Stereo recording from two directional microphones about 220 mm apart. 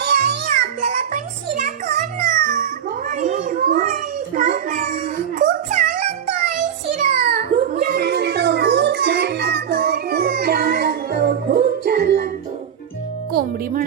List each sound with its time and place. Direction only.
0.0 s music: 45° right (ahead or behind)
3.1 s children playing: 35° right (ahead or behind)